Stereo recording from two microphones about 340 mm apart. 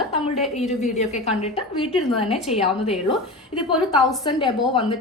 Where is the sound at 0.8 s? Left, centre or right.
Centre.